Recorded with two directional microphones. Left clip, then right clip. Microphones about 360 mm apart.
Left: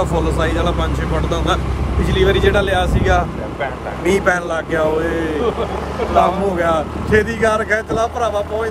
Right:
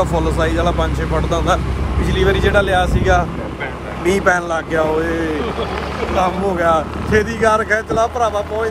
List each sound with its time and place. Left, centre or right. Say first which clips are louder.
0.0 s a man's voice: right 1 dB; centre